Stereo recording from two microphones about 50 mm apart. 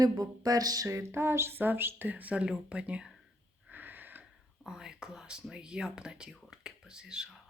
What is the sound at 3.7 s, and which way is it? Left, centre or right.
Wheeze, right.